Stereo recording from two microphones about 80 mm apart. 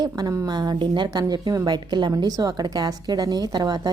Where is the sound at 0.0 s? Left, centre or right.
Right.